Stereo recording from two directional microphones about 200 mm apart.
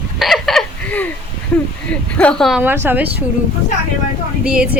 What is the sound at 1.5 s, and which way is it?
A woman's voice, 5° left (ahead or behind).